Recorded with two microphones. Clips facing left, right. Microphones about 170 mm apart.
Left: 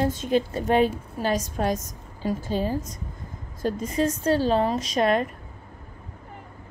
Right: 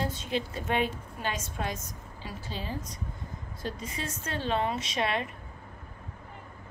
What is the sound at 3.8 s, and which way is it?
A woman's voice, 40° left (ahead or behind).